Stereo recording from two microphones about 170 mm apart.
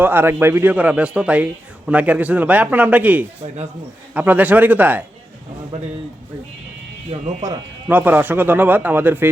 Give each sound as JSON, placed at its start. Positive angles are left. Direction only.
{"t": 0.0, "sound": "a man's voice", "side_deg": -10}
{"t": 3.4, "sound": "speech", "side_deg": -40}
{"t": 4.1, "sound": "a man's voice", "side_deg": -10}
{"t": 7.1, "sound": "speech", "side_deg": -25}
{"t": 7.9, "sound": "a man's voice", "side_deg": -10}